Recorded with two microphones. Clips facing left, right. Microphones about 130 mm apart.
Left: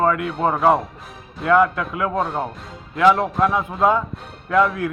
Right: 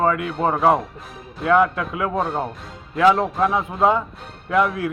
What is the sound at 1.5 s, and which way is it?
Speech, 20° right (ahead or behind).